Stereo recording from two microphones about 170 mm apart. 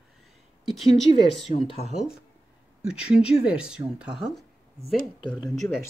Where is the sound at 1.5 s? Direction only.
40° left (ahead or behind).